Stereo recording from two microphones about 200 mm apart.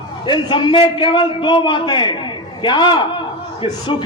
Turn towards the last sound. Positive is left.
turn(degrees=25)  # may be behind; listen again after turning